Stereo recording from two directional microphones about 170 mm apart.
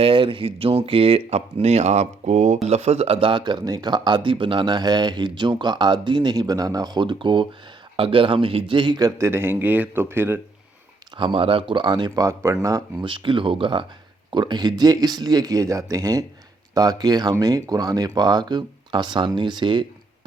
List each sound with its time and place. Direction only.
0.0 s speech: 30° right (ahead or behind); by 10.4 s 15° right (ahead or behind)
11.2 s speech: 30° right (ahead or behind)